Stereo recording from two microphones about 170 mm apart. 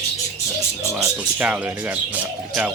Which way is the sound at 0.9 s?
5° right (ahead or behind).